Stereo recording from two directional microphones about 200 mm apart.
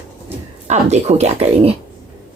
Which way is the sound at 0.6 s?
35° right (ahead or behind).